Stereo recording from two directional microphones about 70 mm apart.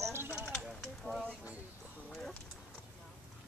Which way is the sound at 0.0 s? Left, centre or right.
Right.